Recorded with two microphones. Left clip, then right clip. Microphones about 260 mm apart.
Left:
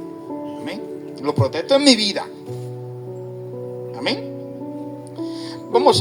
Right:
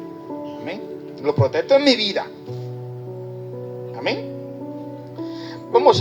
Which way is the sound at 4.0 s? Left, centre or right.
Left.